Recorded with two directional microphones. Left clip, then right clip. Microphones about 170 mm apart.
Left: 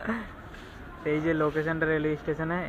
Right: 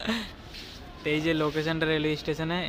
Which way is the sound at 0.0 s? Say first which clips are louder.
Right 2 dB; 35° right (ahead or behind).